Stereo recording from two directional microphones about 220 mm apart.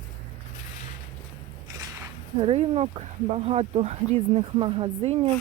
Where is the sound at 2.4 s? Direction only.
25° right (ahead or behind).